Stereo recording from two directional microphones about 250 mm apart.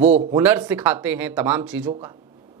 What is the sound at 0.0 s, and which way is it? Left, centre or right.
Speech, right.